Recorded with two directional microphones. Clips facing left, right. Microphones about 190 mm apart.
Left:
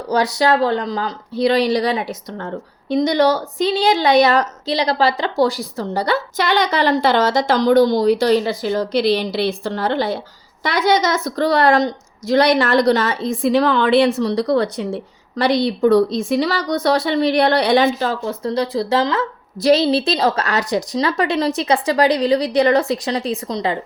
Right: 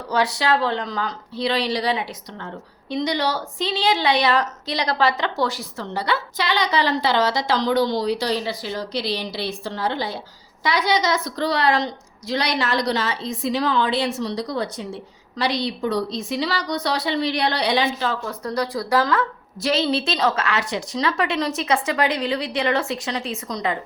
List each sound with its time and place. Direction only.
0.1 s a woman's voice: 40° left (ahead or behind)
4.6 s a woman's voice: 30° left (ahead or behind); by 14.8 s 65° left (ahead or behind)
15.4 s a woman's voice: 55° left (ahead or behind)
18.3 s speech: 25° left (ahead or behind)
19.6 s speech: 35° left (ahead or behind)